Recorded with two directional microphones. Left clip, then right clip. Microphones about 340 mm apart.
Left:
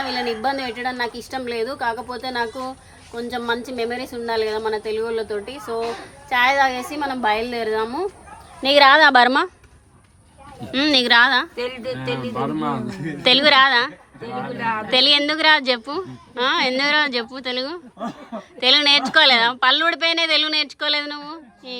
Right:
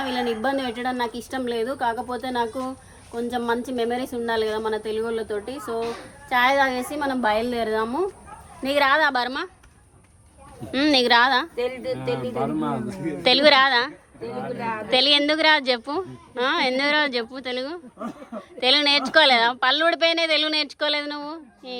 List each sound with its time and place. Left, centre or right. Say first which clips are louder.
0.4 s a woman's voice: left 2 dB; centre
8.6 s a woman's voice: left 7 dB; left
10.7 s speech: left 2 dB; centre
11.5 s a woman's voice: even; left
13.2 s speech: left 2 dB; centre
14.3 s a woman's voice: left 4 dB; left
14.8 s speech: left 2 dB; centre